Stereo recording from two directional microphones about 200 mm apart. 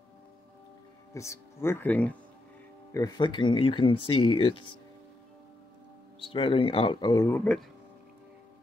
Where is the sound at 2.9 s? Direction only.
20° left (ahead or behind).